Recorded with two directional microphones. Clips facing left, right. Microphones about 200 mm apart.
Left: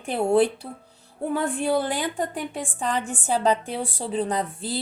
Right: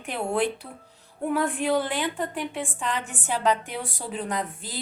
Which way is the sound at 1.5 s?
30° left (ahead or behind).